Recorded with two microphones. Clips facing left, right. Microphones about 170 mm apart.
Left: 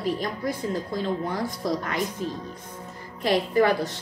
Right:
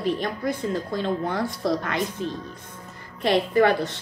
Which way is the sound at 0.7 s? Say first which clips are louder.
Right 1 dB; 65° right (ahead or behind).